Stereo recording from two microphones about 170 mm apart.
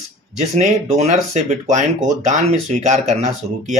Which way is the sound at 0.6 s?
40° right (ahead or behind).